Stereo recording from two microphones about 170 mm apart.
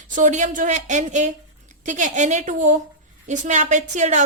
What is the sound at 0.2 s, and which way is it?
A woman's voice, 45° right (ahead or behind).